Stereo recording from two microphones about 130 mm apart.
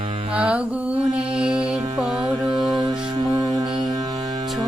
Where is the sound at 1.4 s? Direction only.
5° right (ahead or behind).